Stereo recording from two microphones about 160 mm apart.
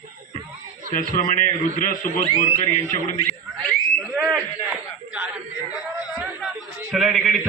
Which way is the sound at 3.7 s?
5° right (ahead or behind).